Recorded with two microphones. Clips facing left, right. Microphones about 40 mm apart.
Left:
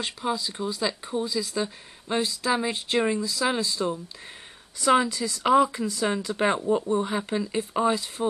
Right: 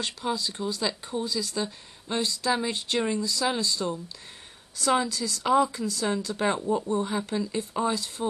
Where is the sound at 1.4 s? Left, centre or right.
Left.